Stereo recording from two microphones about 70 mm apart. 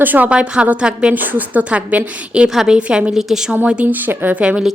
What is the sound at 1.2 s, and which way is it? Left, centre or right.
A woman's voice, right.